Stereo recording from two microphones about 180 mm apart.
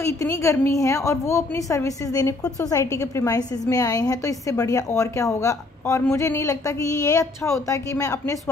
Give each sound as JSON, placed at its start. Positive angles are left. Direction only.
{"t": 0.0, "sound": "a woman's voice", "side_deg": 15}